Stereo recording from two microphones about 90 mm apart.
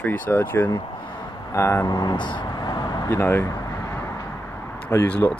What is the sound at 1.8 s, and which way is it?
Vehicle, 50° left (ahead or behind).